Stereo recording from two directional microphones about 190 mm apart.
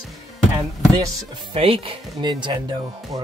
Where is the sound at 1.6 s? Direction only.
30° right (ahead or behind).